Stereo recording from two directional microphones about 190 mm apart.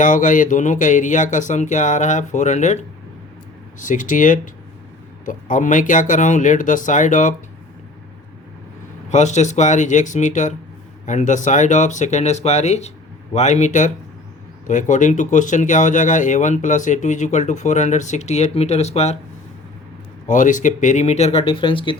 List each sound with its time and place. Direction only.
0.0 s speech: 45° left (ahead or behind)
3.8 s speech: 45° left (ahead or behind)
9.0 s speech: 40° left (ahead or behind)
20.2 s speech: 40° left (ahead or behind); by 21.9 s 25° left (ahead or behind)